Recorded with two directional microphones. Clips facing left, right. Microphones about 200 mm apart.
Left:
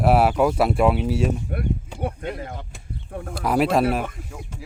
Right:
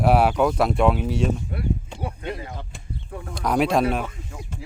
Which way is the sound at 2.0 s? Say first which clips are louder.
Left 2 dB; 50° left (ahead or behind).